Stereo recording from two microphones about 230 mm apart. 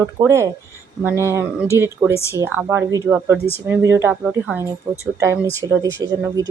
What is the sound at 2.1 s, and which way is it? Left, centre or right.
Speech, centre.